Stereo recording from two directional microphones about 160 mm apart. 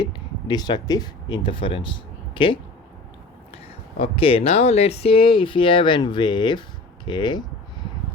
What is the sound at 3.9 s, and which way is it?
Speech, 35° left (ahead or behind).